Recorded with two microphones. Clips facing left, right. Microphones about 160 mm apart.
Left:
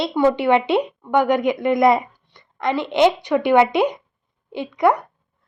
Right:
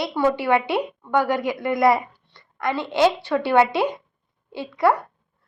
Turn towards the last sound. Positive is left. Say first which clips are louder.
# left 2 dB
turn(degrees=20)  # may be behind; listen again after turning